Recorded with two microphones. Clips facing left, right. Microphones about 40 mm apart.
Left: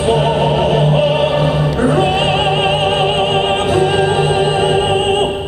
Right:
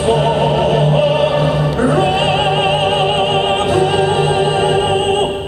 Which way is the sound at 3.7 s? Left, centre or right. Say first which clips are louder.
Even; left.